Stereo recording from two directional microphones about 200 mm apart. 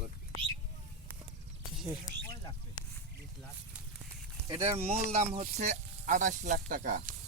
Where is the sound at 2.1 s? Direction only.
40° left (ahead or behind).